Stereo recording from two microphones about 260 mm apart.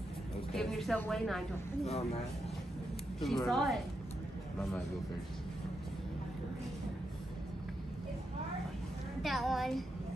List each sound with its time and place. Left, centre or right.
0.5 s a sound: centre
1.9 s speech: left
3.2 s a woman's voice: centre
9.2 s a woman's voice: centre